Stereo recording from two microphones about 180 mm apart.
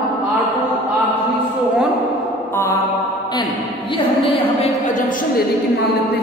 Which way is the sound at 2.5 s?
15° left (ahead or behind).